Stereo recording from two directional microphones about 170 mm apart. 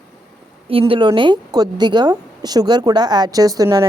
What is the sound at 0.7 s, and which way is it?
A woman's voice, 30° right (ahead or behind).